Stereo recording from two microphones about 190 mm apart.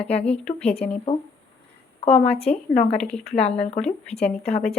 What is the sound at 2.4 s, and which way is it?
Speech, 5° left (ahead or behind).